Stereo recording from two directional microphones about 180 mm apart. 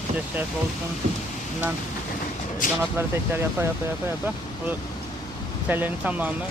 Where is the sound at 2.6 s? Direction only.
50° left (ahead or behind).